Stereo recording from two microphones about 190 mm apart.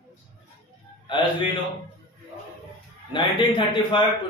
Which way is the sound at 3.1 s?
25° left (ahead or behind).